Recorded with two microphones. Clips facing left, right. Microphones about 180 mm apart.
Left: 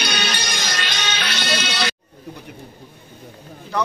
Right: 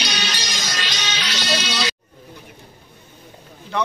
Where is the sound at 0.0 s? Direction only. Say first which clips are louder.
Left 3 dB; 55° left (ahead or behind).